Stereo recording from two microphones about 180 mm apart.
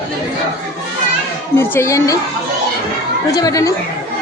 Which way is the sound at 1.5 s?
15° left (ahead or behind).